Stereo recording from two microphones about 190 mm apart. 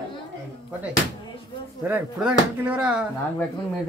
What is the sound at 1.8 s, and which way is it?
Speech, 10° right (ahead or behind).